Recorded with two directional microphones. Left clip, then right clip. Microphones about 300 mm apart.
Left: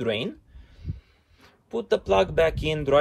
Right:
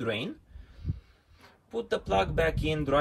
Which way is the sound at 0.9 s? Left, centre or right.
Centre.